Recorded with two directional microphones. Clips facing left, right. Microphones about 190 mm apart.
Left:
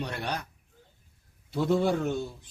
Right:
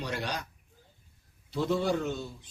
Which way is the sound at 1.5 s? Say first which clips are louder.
Left 3 dB; 55° left (ahead or behind).